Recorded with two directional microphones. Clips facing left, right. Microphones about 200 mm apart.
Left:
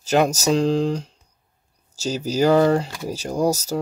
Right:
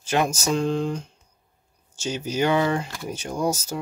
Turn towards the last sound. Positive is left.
turn(degrees=35)  # may be behind; listen again after turning